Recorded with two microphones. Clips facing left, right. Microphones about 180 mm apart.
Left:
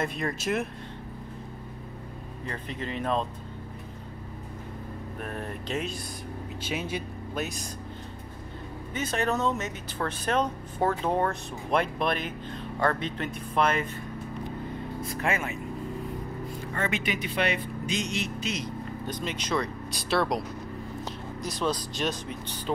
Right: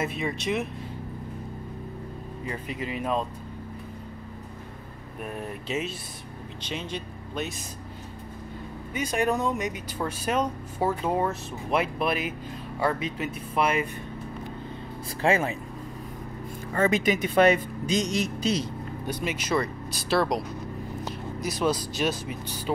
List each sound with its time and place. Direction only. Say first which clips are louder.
0.0 s speech: right 1 dB; centre (ahead or behind)
2.4 s speech: right 2 dB; 10° right (ahead or behind)
5.2 s speech: right 2 dB; 5° right (ahead or behind)
6.6 s speech: left 1 dB; 5° left (ahead or behind)
8.9 s speech: right 2 dB; 10° right (ahead or behind)
15.0 s speech: right 7 dB; 30° right (ahead or behind)
16.7 s speech: right 8 dB; 40° right (ahead or behind)
19.0 s speech: right 4 dB; 10° right (ahead or behind)